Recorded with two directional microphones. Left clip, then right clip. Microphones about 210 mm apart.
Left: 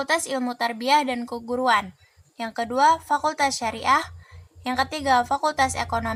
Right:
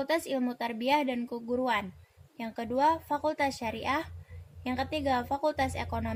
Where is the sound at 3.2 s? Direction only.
60° left (ahead or behind).